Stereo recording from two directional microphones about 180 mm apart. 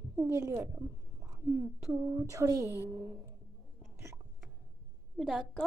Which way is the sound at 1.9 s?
15° right (ahead or behind).